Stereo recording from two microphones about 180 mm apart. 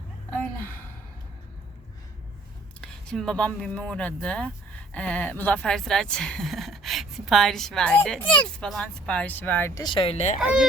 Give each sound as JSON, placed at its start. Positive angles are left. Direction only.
{"t": 0.3, "sound": "a sound", "side_deg": 10}
{"t": 2.8, "sound": "speech", "side_deg": 5}
{"t": 9.8, "sound": "speech", "side_deg": 30}
{"t": 10.4, "sound": "speech", "side_deg": -5}